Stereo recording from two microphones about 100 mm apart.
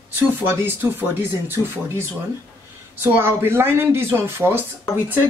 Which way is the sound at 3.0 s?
25° right (ahead or behind).